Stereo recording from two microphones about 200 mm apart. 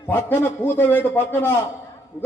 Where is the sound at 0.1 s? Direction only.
10° left (ahead or behind).